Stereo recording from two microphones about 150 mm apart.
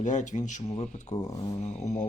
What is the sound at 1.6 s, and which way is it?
Speech, 50° left (ahead or behind).